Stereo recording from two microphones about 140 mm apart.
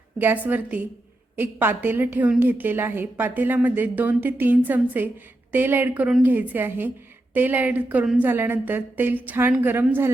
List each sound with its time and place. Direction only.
0.2 s a woman's voice: 15° right (ahead or behind)